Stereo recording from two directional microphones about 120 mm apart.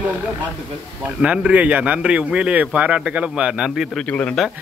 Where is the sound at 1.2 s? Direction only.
10° right (ahead or behind).